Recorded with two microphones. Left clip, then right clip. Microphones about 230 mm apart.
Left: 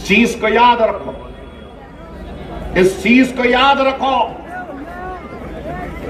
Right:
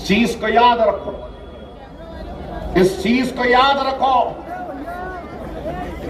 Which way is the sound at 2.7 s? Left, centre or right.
Right.